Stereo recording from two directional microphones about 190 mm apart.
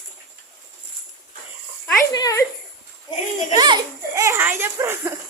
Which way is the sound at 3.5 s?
25° right (ahead or behind).